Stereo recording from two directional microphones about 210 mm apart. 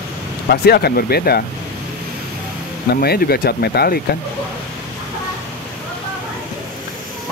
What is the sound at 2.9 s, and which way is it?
Speech, 45° left (ahead or behind).